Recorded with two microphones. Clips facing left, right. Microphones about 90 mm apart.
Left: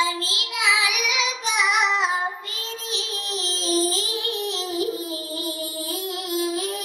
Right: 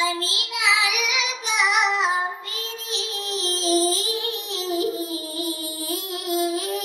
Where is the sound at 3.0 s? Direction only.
20° right (ahead or behind).